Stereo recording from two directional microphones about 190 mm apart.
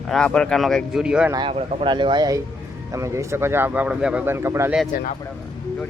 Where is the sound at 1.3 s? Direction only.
30° right (ahead or behind); by 4.7 s 15° right (ahead or behind).